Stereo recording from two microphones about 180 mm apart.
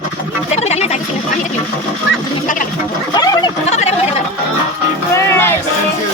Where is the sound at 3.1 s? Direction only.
20° left (ahead or behind).